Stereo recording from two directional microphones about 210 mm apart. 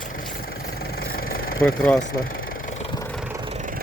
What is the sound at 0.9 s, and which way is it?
Vehicle, 45° left (ahead or behind).